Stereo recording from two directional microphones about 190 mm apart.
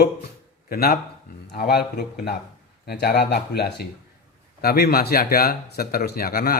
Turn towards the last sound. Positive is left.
turn(degrees=50)  # may be behind; listen again after turning